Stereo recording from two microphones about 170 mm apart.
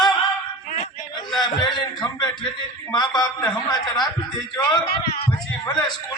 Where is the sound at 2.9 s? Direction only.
25° left (ahead or behind).